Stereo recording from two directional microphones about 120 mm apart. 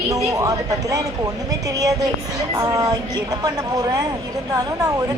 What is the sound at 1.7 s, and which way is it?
Speech, 30° right (ahead or behind).